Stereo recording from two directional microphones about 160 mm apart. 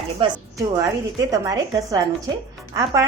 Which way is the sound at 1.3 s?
20° right (ahead or behind).